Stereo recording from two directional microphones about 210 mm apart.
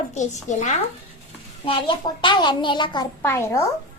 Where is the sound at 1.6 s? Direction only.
25° left (ahead or behind).